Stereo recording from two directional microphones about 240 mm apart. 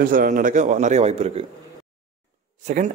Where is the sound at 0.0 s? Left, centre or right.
Right.